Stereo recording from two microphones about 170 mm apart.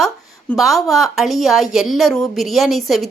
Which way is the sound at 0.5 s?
Centre (ahead or behind).